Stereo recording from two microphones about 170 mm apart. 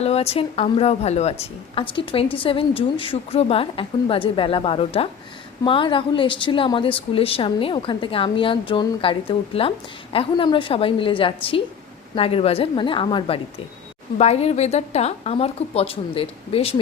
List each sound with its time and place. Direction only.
0.0 s a woman's voice: 35° left (ahead or behind)